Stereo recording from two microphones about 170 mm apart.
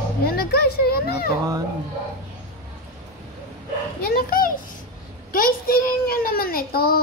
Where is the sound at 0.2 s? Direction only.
65° left (ahead or behind).